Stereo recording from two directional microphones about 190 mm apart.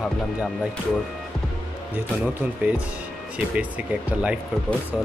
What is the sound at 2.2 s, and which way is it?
Speech, 10° right (ahead or behind).